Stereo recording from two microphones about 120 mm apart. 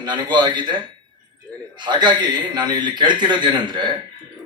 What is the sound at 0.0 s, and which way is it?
A man's voice, 40° right (ahead or behind).